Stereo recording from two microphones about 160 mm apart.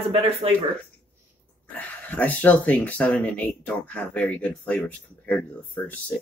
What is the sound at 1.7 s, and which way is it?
Speech, 10° left (ahead or behind).